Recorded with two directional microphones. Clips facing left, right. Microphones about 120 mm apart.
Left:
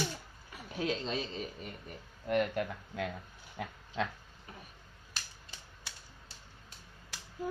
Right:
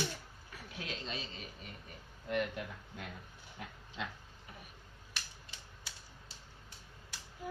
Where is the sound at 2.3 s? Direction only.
60° left (ahead or behind).